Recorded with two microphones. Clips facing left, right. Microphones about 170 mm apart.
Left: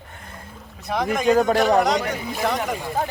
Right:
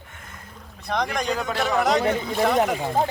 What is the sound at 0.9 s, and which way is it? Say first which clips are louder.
Speech: left 2 dB; 5° left (ahead or behind).